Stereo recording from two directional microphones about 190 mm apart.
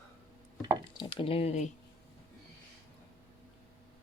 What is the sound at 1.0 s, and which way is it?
Speech, 25° left (ahead or behind).